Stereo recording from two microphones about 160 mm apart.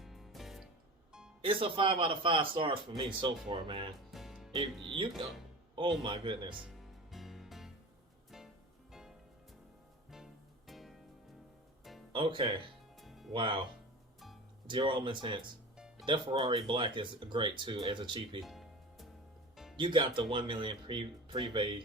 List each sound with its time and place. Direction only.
0.0 s music: centre (ahead or behind)
1.4 s speech: 35° right (ahead or behind)
4.1 s music: centre (ahead or behind)
6.0 s speech: 30° right (ahead or behind)
6.6 s music: centre (ahead or behind)
8.9 s music: 5° right (ahead or behind)
10.7 s music: centre (ahead or behind)
12.1 s speech: 30° right (ahead or behind)
13.0 s music: centre (ahead or behind)
13.3 s speech: 30° right (ahead or behind)
14.7 s speech: 30° right (ahead or behind)
18.4 s music: centre (ahead or behind)
19.7 s speech: 30° right (ahead or behind)